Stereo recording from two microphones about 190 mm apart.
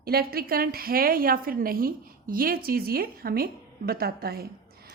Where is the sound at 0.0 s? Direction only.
55° right (ahead or behind).